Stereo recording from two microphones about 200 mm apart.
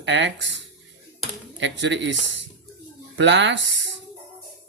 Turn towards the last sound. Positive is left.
turn(degrees=-65)  # may be behind; listen again after turning